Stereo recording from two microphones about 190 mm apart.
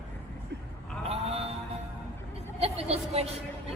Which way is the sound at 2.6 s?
30° right (ahead or behind).